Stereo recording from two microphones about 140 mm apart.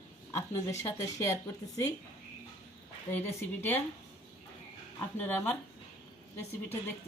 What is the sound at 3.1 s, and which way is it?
Speech, 15° left (ahead or behind).